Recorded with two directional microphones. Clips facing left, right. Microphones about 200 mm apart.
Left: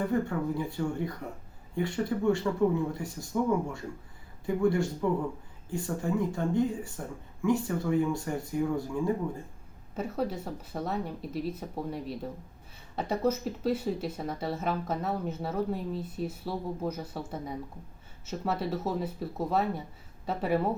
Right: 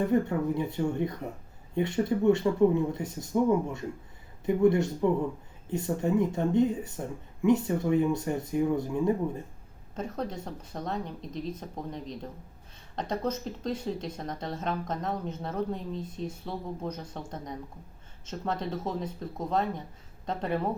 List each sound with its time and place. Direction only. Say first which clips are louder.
0.1 s speech: right 3 dB; 20° right (ahead or behind)
4.4 s speech: right 3 dB; 20° right (ahead or behind)
9.9 s speech: left 2 dB; 5° left (ahead or behind)